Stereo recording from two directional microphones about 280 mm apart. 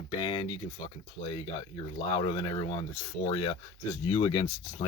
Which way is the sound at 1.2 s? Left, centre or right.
Left.